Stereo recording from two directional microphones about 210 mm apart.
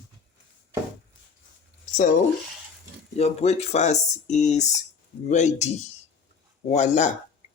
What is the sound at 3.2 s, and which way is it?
Speech, 30° left (ahead or behind).